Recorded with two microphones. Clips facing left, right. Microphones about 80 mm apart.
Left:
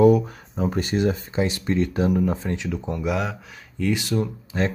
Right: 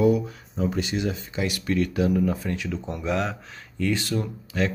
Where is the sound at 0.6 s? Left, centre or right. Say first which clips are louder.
Left 3 dB; left; by 2.9 s centre.